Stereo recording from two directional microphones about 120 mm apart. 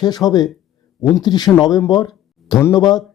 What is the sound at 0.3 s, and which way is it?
A man's voice, 35° left (ahead or behind).